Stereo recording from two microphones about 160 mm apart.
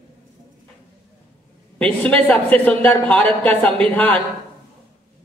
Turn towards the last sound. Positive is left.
turn(degrees=10)  # may be behind; listen again after turning